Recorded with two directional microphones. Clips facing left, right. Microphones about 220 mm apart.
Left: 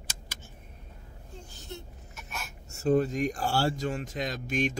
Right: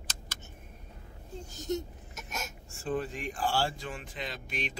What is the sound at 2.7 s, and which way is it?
Speech, 40° left (ahead or behind).